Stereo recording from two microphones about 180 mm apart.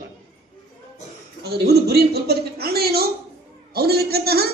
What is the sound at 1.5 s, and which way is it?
A man's voice, 65° right (ahead or behind).